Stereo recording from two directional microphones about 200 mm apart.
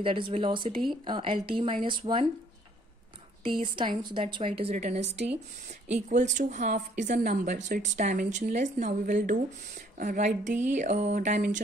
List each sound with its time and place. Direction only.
0.0 s a woman's voice: 25° right (ahead or behind)
3.4 s a woman's voice: 25° right (ahead or behind)